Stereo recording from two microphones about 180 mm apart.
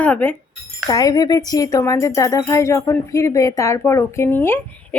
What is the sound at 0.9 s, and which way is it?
Speech, 20° left (ahead or behind).